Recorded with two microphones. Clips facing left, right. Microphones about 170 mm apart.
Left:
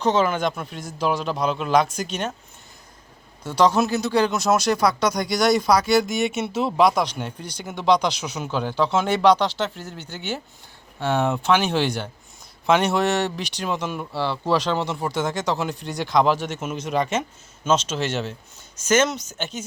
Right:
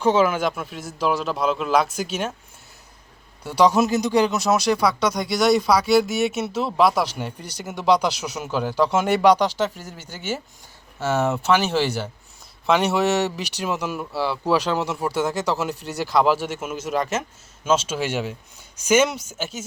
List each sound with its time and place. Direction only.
0.0 s speech: 10° right (ahead or behind)
3.4 s speech: 10° right (ahead or behind)